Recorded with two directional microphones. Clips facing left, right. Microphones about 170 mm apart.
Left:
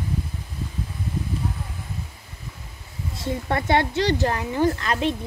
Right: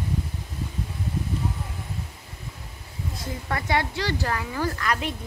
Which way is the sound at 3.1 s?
25° left (ahead or behind).